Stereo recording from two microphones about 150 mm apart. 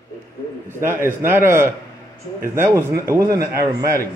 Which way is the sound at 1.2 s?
15° right (ahead or behind).